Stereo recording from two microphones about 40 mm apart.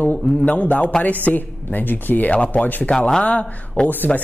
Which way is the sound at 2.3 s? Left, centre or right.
Left.